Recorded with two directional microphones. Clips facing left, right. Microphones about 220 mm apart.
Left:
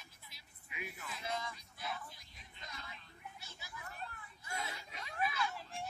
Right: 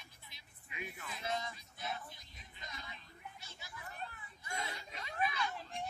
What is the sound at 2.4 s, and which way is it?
Vehicle, centre (ahead or behind).